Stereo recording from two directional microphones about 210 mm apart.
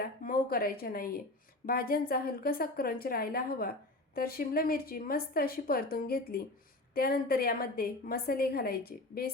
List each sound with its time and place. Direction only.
0.0 s a woman's voice: 45° left (ahead or behind)